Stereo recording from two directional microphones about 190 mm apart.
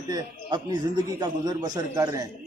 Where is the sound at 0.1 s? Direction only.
20° right (ahead or behind).